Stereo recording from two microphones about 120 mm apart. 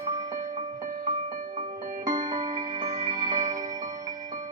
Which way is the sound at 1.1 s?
85° right.